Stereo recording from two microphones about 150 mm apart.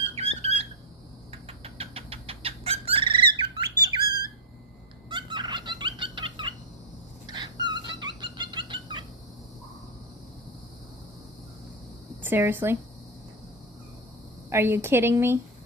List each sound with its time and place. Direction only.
0.1 s squeak: 40° right (ahead or behind)
1.3 s bird: 40° right (ahead or behind)
5.0 s fowl: 30° right (ahead or behind)
7.3 s dog: 30° right (ahead or behind)
12.2 s speech: 15° right (ahead or behind)
14.5 s a woman's voice: 15° right (ahead or behind)